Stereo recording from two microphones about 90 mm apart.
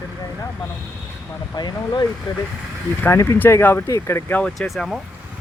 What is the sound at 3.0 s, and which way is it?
Speech, 30° left (ahead or behind).